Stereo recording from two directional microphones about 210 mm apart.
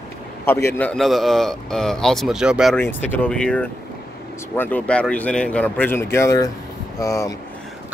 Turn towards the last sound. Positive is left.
turn(degrees=15)  # may be behind; listen again after turning